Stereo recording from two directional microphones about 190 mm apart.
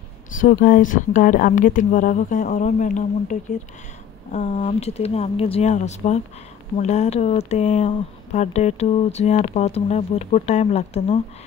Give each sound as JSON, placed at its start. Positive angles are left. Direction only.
{"t": 0.4, "sound": "speech", "side_deg": 45}
{"t": 4.3, "sound": "speech", "side_deg": 30}